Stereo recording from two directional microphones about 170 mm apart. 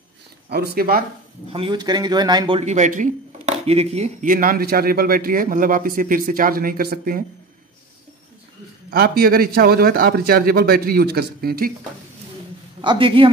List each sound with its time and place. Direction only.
0.5 s a man's voice: 65° right (ahead or behind)
1.5 s a man's voice: 30° right (ahead or behind)
2.6 s speech: 45° right (ahead or behind)
4.3 s a man's voice: 55° right (ahead or behind)
8.9 s a man's voice: 60° right (ahead or behind)
12.8 s speech: 30° right (ahead or behind)